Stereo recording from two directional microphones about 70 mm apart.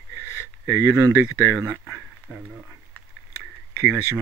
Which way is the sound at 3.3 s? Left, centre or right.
Right.